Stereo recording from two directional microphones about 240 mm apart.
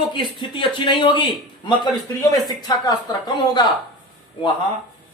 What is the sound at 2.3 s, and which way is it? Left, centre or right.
Speech, centre.